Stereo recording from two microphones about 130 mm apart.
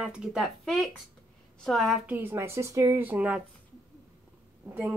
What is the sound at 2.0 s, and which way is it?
Speech, 15° right (ahead or behind).